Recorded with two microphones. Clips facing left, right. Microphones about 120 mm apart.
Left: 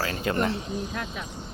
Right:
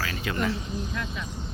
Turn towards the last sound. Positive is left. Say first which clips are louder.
# left 1 dB
turn(degrees=45)  # may be behind; listen again after turning